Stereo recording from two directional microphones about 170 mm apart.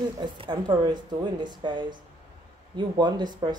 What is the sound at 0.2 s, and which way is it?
Speech, 25° right (ahead or behind).